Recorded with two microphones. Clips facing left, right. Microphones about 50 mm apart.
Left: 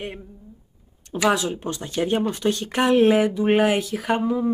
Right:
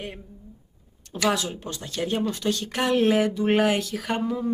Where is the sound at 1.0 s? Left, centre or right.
Centre.